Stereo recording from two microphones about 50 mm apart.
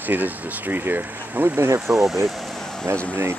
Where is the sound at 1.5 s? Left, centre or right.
Right.